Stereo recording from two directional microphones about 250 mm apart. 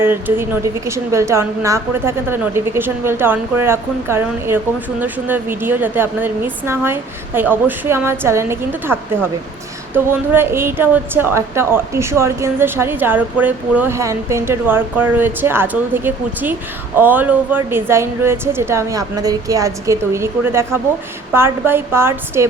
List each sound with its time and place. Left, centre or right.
0.0 s a woman's voice: centre